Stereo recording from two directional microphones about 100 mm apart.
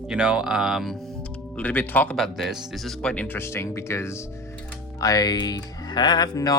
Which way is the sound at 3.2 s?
25° left (ahead or behind).